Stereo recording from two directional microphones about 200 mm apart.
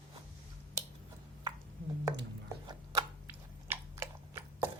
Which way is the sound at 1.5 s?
20° right (ahead or behind).